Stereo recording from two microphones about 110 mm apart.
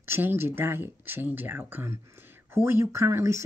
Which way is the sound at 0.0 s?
20° right (ahead or behind).